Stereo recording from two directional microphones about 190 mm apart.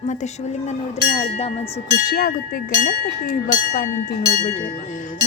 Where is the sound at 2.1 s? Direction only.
50° left (ahead or behind).